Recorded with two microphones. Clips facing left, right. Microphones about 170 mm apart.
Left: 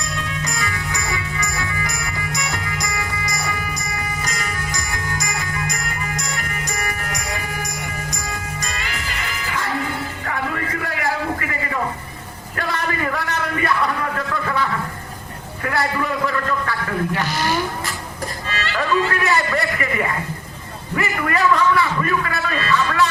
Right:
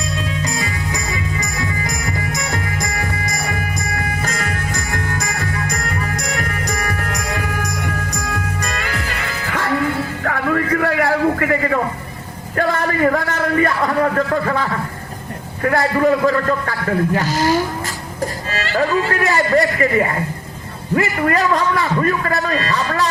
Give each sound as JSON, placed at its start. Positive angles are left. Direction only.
{"t": 0.2, "sound": "music", "side_deg": -35}
{"t": 1.8, "sound": "music", "side_deg": -40}
{"t": 4.2, "sound": "jingle bell", "side_deg": -50}
{"t": 6.1, "sound": "music", "side_deg": -60}
{"t": 12.5, "sound": "a sound", "side_deg": -45}
{"t": 15.6, "sound": "a man's voice", "side_deg": -40}
{"t": 18.5, "sound": "music", "side_deg": -40}
{"t": 20.9, "sound": "a sound", "side_deg": -35}